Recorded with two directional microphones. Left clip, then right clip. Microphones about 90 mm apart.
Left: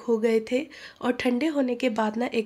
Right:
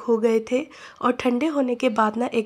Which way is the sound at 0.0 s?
30° right (ahead or behind).